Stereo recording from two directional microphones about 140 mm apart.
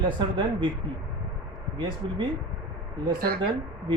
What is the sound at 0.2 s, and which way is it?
Speech, 35° right (ahead or behind).